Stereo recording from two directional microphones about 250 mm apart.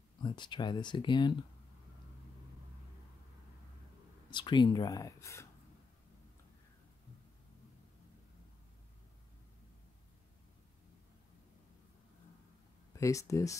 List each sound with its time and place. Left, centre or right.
0.2 s speech: centre
4.3 s speech: centre
12.9 s speech: centre